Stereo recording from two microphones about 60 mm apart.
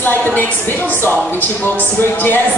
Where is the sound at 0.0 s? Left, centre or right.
Left.